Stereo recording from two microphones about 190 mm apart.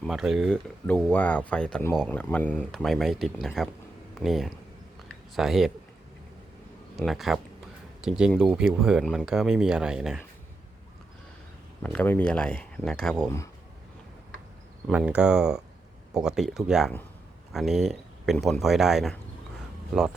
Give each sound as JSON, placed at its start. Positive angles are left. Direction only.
{"t": 0.1, "sound": "speech", "side_deg": 0}
{"t": 6.9, "sound": "speech", "side_deg": 0}
{"t": 11.8, "sound": "speech", "side_deg": 10}
{"t": 14.8, "sound": "speech", "side_deg": -5}